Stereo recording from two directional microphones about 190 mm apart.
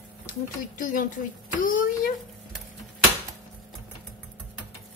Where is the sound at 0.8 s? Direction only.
45° left (ahead or behind).